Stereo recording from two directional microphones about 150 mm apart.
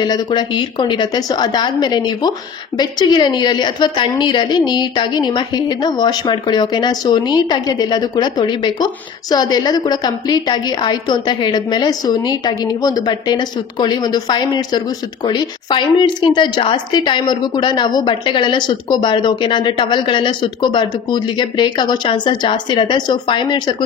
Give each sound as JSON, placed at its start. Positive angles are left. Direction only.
{"t": 0.0, "sound": "a woman's voice", "side_deg": 30}